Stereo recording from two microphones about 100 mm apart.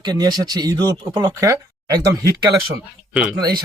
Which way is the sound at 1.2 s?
30° right (ahead or behind).